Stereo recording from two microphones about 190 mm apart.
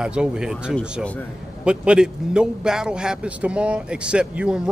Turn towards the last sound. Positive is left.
turn(degrees=-5)  # may be behind; listen again after turning